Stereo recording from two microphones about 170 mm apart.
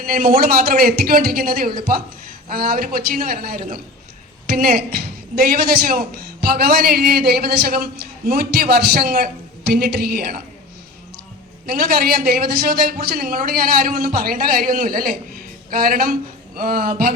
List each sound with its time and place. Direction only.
0.0 s a woman's voice: 55° right (ahead or behind)
11.6 s a woman's voice: 60° right (ahead or behind)